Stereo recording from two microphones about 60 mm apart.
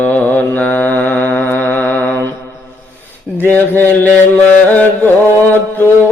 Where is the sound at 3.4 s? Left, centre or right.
Left.